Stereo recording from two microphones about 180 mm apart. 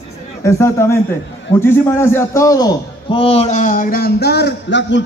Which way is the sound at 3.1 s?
35° left (ahead or behind).